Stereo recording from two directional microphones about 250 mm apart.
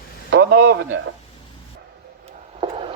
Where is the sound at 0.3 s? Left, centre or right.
Right.